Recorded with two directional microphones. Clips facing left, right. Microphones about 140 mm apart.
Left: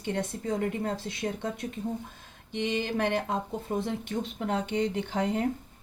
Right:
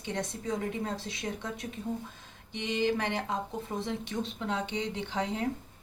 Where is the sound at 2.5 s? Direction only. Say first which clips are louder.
Even; 60° left (ahead or behind).